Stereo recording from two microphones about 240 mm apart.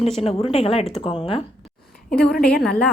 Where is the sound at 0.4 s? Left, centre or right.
Left.